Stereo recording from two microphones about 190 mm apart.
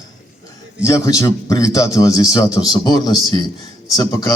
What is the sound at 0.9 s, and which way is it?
A man's voice, 15° left (ahead or behind).